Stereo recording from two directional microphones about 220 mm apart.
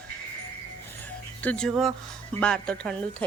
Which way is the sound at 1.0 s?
5° left (ahead or behind).